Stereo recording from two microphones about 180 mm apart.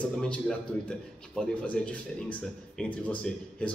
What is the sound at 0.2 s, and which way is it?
A man's voice, 5° left (ahead or behind).